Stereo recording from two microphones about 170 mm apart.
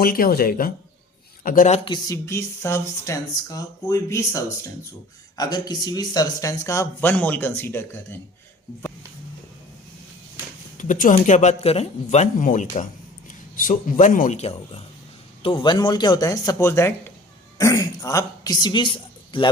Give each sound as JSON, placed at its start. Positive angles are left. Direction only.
{"t": 0.0, "sound": "speech", "side_deg": 60}
{"t": 1.5, "sound": "speech", "side_deg": 50}
{"t": 1.8, "sound": "speech", "side_deg": 25}
{"t": 10.8, "sound": "speech", "side_deg": 50}
{"t": 15.4, "sound": "a man's voice", "side_deg": 30}